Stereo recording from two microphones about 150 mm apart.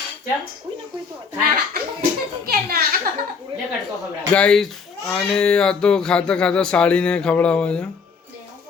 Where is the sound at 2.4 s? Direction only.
90° right.